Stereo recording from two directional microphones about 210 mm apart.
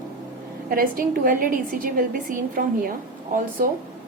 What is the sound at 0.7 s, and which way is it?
A woman's voice, 45° right (ahead or behind).